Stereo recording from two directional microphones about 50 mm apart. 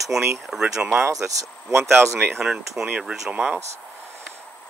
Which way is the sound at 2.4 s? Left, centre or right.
Centre.